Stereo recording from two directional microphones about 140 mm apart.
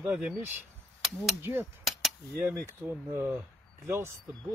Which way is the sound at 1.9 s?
Centre (ahead or behind).